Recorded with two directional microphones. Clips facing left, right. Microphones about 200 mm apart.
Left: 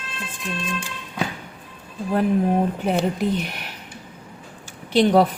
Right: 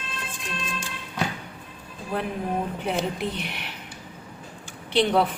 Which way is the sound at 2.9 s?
40° left (ahead or behind).